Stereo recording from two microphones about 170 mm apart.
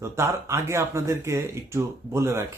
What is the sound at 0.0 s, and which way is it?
Speech, 15° right (ahead or behind).